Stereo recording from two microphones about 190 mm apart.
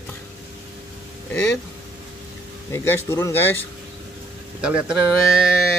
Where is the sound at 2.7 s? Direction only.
15° left (ahead or behind).